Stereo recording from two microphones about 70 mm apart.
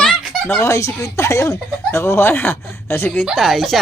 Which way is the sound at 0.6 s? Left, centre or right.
Left.